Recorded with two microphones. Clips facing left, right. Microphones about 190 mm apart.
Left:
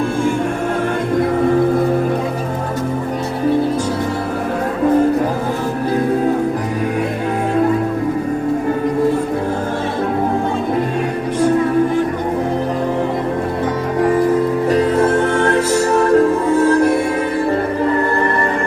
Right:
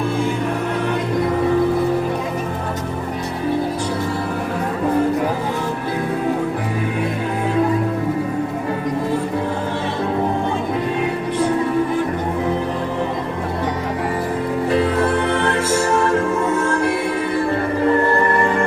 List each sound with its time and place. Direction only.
14.7 s music: 45° left (ahead or behind)